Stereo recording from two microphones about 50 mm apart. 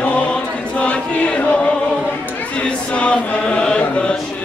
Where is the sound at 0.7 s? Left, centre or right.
Left.